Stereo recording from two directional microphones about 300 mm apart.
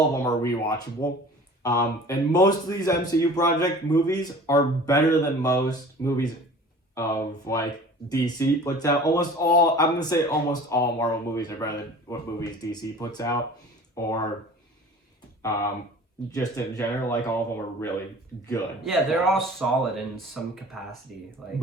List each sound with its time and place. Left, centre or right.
0.1 s a man's voice: centre
15.4 s a man's voice: centre
18.4 s speech: centre
21.1 s speech: left